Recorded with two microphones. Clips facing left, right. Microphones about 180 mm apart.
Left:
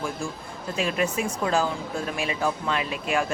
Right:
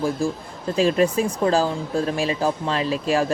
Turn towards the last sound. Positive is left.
turn(degrees=-35)  # may be behind; listen again after turning